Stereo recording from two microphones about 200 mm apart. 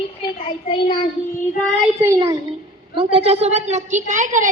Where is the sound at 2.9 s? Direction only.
30° right (ahead or behind).